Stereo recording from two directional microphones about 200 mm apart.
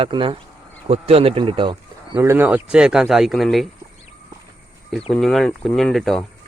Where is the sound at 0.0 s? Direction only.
25° right (ahead or behind).